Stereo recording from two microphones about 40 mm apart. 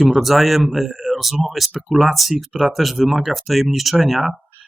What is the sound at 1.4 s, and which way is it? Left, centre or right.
Speech, centre.